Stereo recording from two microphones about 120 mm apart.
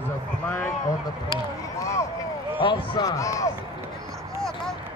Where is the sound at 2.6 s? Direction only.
45° left (ahead or behind).